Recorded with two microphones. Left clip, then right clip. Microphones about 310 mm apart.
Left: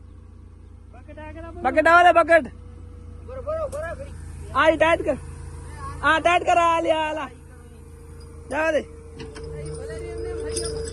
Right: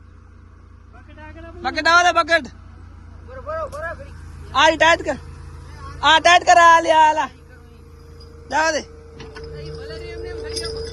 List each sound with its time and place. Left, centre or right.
1.2 s speech: centre
1.6 s a man's voice: centre
3.5 s vehicle: right
4.5 s a man's voice: centre
8.4 s a man's voice: centre